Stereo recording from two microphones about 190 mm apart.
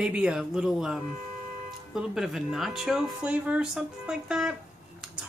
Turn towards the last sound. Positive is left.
turn(degrees=-5)  # may be behind; listen again after turning